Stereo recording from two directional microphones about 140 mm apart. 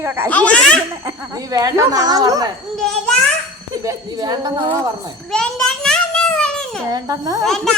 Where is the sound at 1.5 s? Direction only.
25° right (ahead or behind).